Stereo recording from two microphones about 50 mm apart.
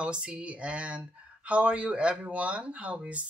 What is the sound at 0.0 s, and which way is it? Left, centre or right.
Speech, right.